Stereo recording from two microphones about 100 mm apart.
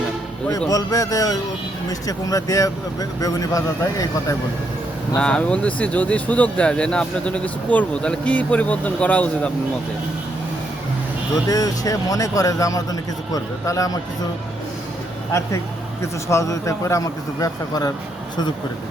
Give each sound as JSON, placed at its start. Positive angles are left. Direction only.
{"t": 0.7, "sound": "speech", "side_deg": 35}
{"t": 5.2, "sound": "speech", "side_deg": 10}
{"t": 11.4, "sound": "speech", "side_deg": 35}
{"t": 16.0, "sound": "speech", "side_deg": 30}